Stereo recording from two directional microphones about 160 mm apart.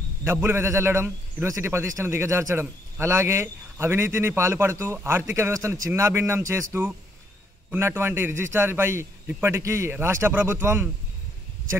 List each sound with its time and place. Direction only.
0.2 s a man's voice: 15° right (ahead or behind)